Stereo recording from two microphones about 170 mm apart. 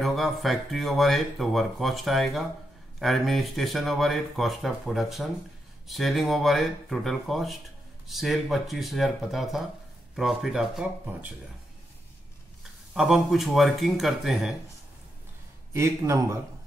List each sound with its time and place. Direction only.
0.0 s speech: centre (ahead or behind)
12.9 s speech: centre (ahead or behind)
15.7 s a man's voice: 15° right (ahead or behind)